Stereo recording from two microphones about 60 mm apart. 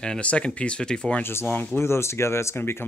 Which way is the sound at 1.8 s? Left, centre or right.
Left.